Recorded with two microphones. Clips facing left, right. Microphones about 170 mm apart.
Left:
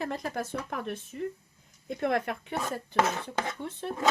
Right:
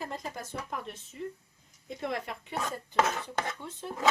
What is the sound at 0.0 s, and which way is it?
Speech, 70° left (ahead or behind).